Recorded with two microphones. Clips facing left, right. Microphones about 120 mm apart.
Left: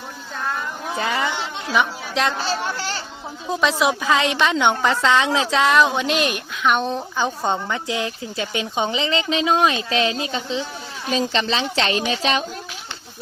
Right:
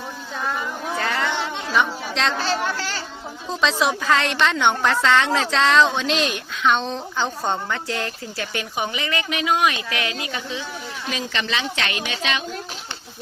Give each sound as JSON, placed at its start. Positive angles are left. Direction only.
{"t": 0.9, "sound": "a sound", "side_deg": 15}
{"t": 1.7, "sound": "a woman's voice", "side_deg": 10}
{"t": 2.7, "sound": "speech", "side_deg": 25}
{"t": 3.5, "sound": "a woman's voice", "side_deg": 10}